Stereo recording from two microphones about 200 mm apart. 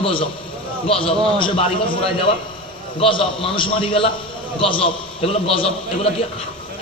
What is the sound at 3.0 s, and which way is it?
A man's voice, 25° left (ahead or behind).